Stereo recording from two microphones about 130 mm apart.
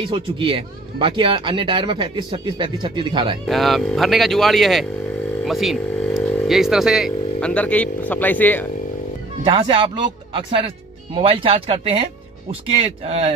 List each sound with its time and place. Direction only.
0.0 s speech: 40° right (ahead or behind)
3.4 s speech: centre (ahead or behind)
9.4 s speech: 45° right (ahead or behind)